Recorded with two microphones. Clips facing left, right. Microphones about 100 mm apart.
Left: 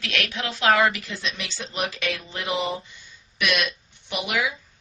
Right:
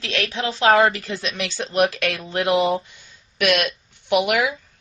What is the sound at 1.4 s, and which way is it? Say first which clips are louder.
Speech: right 14 dB; 60° right (ahead or behind).